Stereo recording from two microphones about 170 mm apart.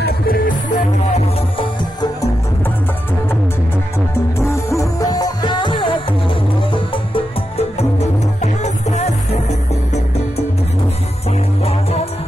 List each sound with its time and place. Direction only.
0.0 s music: 55° left (ahead or behind)
4.4 s music: 15° left (ahead or behind)
8.4 s music: 40° left (ahead or behind)
11.6 s music: 35° left (ahead or behind)